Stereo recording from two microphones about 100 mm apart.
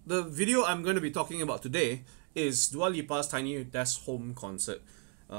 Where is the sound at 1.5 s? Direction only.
35° right (ahead or behind).